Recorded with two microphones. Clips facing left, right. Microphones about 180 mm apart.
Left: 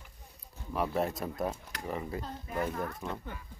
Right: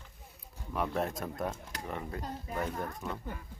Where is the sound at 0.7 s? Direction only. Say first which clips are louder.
Left 2 dB; centre (ahead or behind).